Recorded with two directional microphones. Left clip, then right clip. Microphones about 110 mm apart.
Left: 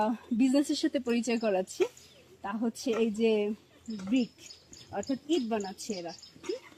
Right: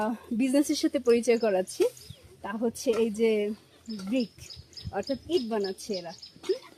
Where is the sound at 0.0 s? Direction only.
50° right (ahead or behind).